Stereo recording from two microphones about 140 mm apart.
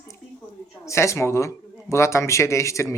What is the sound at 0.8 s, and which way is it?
Speech, 20° left (ahead or behind).